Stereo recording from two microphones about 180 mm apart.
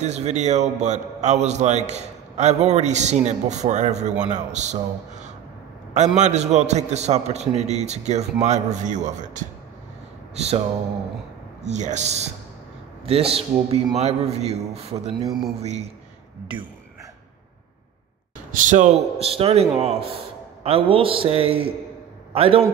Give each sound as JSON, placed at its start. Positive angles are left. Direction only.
{"t": 0.0, "sound": "a man's voice", "side_deg": -40}
{"t": 6.1, "sound": "a man's voice", "side_deg": -40}
{"t": 10.3, "sound": "a sound", "side_deg": -35}
{"t": 11.6, "sound": "a man's voice", "side_deg": -40}
{"t": 15.2, "sound": "a man's voice", "side_deg": 0}
{"t": 15.6, "sound": "a man's voice", "side_deg": -35}
{"t": 18.5, "sound": "a man's voice", "side_deg": -45}